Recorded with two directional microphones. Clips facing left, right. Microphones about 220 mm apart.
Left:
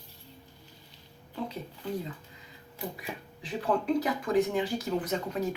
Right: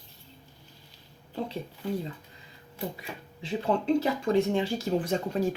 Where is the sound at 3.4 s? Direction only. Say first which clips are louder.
Right 2 dB; 25° right (ahead or behind).